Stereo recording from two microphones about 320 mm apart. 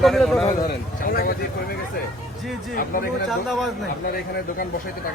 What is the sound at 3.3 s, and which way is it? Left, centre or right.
Speech, centre.